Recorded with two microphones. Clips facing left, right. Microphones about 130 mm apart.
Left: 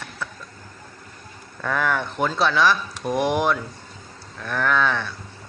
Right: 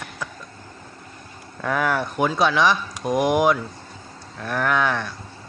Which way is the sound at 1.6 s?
10° right (ahead or behind).